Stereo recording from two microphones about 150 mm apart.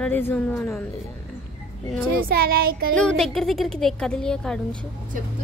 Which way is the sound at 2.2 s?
90° right.